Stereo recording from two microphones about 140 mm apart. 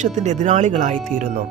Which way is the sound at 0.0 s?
60° right (ahead or behind).